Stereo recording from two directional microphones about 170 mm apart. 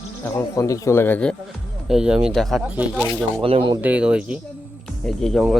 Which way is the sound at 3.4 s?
30° right (ahead or behind).